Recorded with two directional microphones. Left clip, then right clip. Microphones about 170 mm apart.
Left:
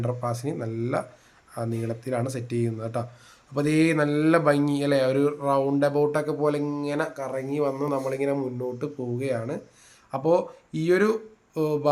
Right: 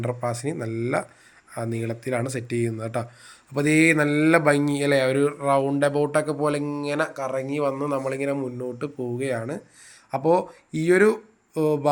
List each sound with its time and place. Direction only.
0.0 s a man's voice: 15° right (ahead or behind)